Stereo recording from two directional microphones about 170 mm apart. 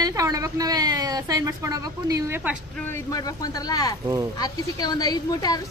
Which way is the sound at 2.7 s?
10° left (ahead or behind).